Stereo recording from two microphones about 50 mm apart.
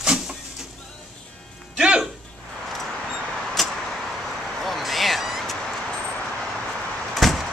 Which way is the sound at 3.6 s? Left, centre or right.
Centre.